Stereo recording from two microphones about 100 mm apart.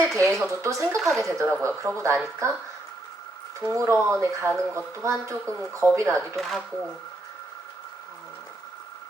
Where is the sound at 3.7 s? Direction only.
30° right (ahead or behind).